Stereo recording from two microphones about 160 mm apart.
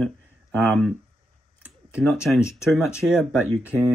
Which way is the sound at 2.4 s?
15° left (ahead or behind).